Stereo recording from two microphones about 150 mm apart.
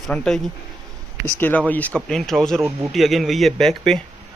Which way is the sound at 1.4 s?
10° left (ahead or behind).